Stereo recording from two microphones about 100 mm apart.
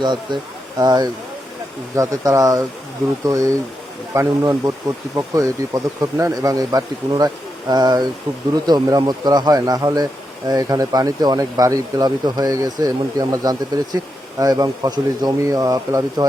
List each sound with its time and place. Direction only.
0.0 s speech: 50° right (ahead or behind)